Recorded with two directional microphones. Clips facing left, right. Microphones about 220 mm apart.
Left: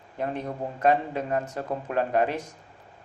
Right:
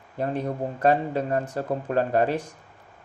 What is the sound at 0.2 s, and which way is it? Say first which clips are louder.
A man's voice: right 3 dB; 35° right (ahead or behind).